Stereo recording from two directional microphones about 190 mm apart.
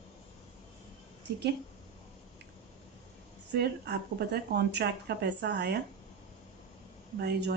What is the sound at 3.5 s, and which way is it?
Speech, 60° right (ahead or behind).